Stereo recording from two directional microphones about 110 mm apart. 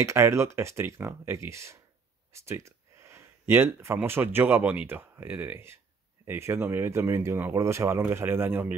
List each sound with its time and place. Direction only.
0.0 s speech: 25° right (ahead or behind)